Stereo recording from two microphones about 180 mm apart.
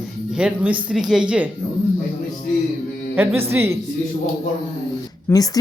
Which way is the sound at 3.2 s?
10° right (ahead or behind).